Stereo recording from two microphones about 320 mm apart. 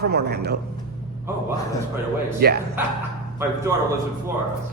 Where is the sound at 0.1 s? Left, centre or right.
Right.